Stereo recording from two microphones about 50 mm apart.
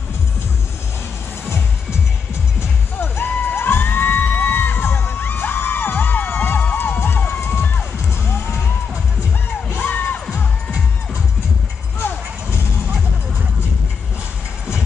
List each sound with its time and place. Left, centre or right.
2.6 s music: left
3.5 s crowd: left
6.7 s music: left
9.8 s crowd: left
12.0 s music: left